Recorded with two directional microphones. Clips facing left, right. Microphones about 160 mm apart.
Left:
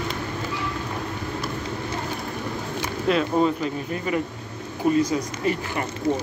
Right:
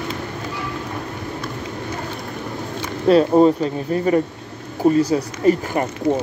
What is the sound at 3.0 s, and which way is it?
Speech, 35° right (ahead or behind).